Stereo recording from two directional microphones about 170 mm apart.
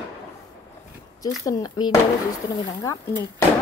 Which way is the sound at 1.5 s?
25° left (ahead or behind).